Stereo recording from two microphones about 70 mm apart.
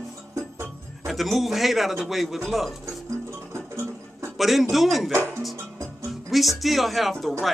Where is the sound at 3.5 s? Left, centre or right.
Right.